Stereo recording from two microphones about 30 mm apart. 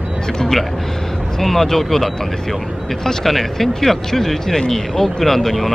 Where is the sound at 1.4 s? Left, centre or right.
Centre.